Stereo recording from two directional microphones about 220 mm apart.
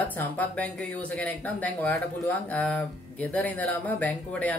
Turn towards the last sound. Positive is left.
turn(degrees=5)  # may be behind; listen again after turning